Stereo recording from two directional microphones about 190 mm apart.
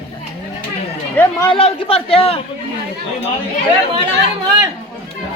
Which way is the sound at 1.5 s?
30° left (ahead or behind).